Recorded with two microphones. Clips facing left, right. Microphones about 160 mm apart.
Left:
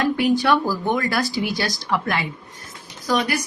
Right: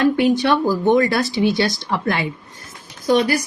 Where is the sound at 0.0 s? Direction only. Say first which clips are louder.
Right 3 dB; 25° right (ahead or behind).